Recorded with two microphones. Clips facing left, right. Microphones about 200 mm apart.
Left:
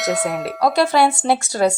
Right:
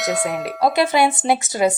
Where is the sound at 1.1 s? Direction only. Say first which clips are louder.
Left 1 dB; 15° right (ahead or behind).